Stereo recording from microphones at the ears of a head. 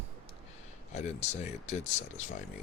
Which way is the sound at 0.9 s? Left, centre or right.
Left.